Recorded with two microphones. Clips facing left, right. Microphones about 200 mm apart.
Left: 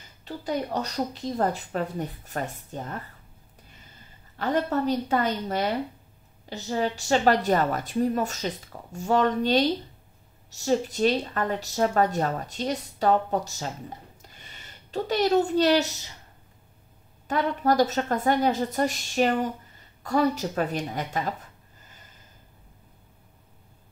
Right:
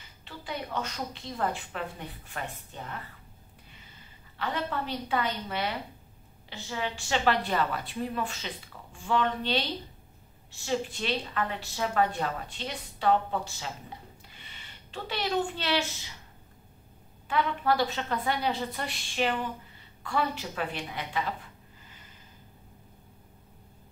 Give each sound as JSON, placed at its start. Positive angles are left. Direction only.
{"t": 0.2, "sound": "a woman's voice", "side_deg": 40}
{"t": 4.4, "sound": "a woman's voice", "side_deg": 45}
{"t": 17.3, "sound": "a woman's voice", "side_deg": 40}